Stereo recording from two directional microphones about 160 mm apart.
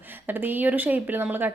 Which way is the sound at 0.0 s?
10° right (ahead or behind).